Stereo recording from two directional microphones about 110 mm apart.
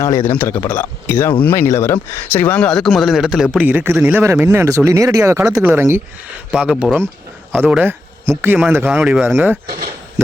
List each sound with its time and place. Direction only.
0.3 s speech: 20° left (ahead or behind); by 4.2 s 15° right (ahead or behind)
4.2 s speech: 25° right (ahead or behind)
5.5 s speech: 5° right (ahead or behind)
5.7 s speech: 20° right (ahead or behind)